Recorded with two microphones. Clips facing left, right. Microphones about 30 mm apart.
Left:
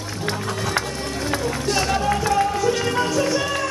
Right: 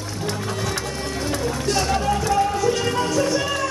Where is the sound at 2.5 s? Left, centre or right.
Centre.